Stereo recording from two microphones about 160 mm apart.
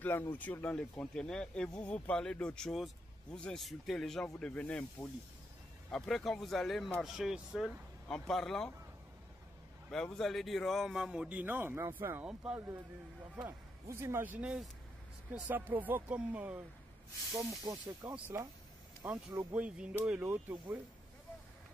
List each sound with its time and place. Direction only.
0.0 s speech: 15° left (ahead or behind)
9.8 s speech: 5° left (ahead or behind)
17.3 s speech: 20° right (ahead or behind)
19.0 s speech: 10° right (ahead or behind)